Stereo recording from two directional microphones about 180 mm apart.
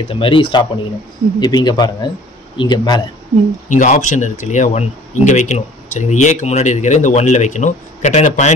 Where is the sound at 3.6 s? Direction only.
45° left (ahead or behind).